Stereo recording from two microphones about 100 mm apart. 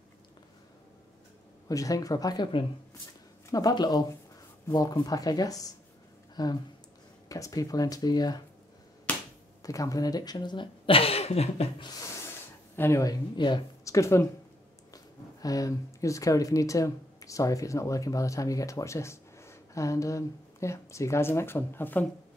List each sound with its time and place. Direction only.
1.7 s speech: 35° left (ahead or behind)
3.4 s speech: 40° left (ahead or behind)
9.6 s speech: 35° left (ahead or behind); by 11.6 s 90° left
12.7 s speech: 25° left (ahead or behind)
13.0 s speech: 50° left (ahead or behind)
13.8 s speech: 30° left (ahead or behind)
15.4 s speech: 35° left (ahead or behind); by 22.0 s 20° left (ahead or behind)